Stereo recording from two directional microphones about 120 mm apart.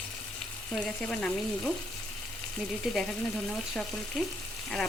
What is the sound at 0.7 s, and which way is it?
Speech, 5° left (ahead or behind).